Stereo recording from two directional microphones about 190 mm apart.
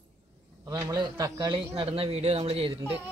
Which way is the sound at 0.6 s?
15° right (ahead or behind).